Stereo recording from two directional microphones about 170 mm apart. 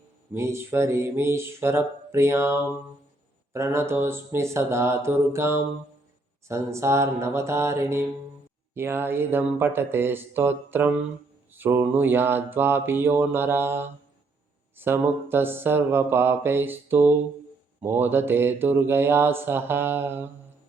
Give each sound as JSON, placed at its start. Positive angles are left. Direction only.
{"t": 0.3, "sound": "mantra", "side_deg": -15}